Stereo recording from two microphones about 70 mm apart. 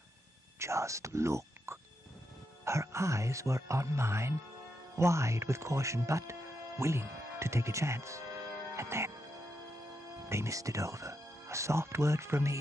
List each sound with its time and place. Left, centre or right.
0.6 s speech: right
8.7 s music: right
10.2 s speech: right